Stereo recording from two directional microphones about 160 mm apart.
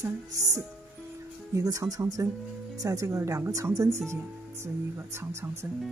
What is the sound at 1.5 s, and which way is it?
Speech, 20° right (ahead or behind).